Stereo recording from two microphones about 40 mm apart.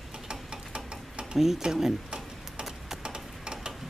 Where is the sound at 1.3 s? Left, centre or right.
Centre.